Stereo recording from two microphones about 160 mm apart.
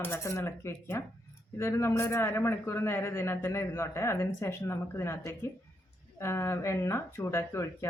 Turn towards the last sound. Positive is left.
turn(degrees=15)  # may be behind; listen again after turning